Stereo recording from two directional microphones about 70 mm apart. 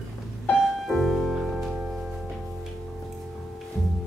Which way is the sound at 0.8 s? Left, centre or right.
Centre.